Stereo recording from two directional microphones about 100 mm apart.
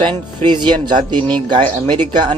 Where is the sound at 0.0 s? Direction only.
50° right (ahead or behind).